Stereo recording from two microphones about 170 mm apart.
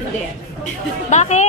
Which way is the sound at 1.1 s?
45° left (ahead or behind).